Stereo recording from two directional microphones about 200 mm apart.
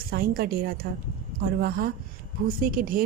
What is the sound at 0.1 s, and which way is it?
A woman's voice, 50° right (ahead or behind).